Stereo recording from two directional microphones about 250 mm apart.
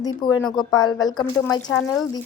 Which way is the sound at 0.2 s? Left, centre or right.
Centre.